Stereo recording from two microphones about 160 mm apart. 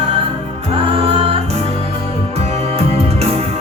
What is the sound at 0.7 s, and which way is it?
Music, 35° right (ahead or behind).